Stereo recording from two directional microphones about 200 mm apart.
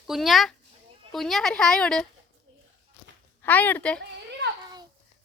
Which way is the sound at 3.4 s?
10° left (ahead or behind).